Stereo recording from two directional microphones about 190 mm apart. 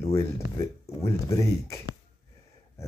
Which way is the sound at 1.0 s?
15° left (ahead or behind).